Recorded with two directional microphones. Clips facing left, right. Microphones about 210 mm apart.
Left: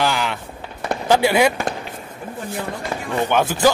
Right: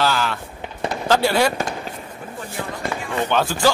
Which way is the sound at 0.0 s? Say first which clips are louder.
Even; 15° left (ahead or behind).